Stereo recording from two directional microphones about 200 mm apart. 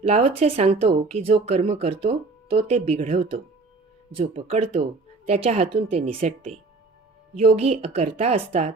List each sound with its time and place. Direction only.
0.0 s speech: 30° right (ahead or behind)